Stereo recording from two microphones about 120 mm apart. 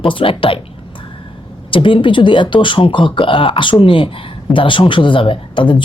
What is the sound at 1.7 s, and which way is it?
Speech, 45° left (ahead or behind).